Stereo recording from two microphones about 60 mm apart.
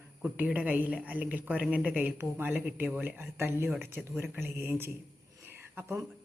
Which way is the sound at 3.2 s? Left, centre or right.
Right.